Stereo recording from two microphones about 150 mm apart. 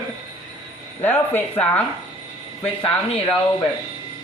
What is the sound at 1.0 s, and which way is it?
Speech, 10° left (ahead or behind).